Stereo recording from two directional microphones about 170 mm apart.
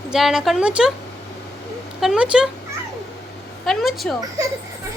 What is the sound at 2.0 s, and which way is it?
Speech, 5° right (ahead or behind).